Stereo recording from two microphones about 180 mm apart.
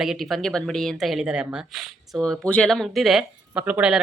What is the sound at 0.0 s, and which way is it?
A woman's voice, centre (ahead or behind).